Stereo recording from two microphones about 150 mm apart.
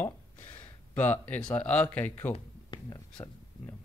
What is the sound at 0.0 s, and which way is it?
Speech, 10° left (ahead or behind).